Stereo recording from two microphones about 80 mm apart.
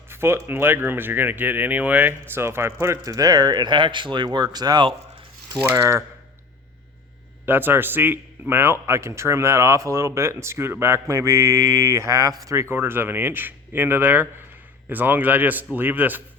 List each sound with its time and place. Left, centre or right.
0.1 s a sound: right
0.4 s speech: right
3.0 s speech: right
5.7 s a man's voice: right
7.4 s a man's voice: right
11.1 s mantra: right
12.7 s speech: right